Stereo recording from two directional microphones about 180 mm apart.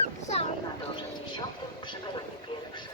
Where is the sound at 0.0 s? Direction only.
35° left (ahead or behind).